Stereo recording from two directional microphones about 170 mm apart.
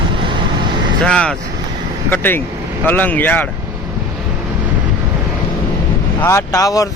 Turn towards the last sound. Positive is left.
turn(degrees=20)  # may be behind; listen again after turning